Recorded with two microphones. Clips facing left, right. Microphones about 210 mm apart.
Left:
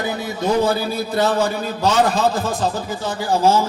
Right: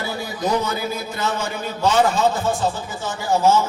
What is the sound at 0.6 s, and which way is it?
A man's voice, 35° left (ahead or behind).